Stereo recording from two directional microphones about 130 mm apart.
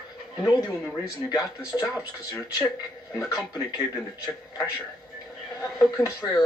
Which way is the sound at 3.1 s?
25° left (ahead or behind).